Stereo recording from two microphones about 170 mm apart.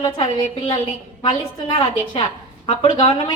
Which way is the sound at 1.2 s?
30° left (ahead or behind).